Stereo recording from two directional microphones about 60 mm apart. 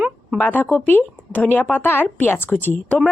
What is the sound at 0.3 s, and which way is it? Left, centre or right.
Speech, left.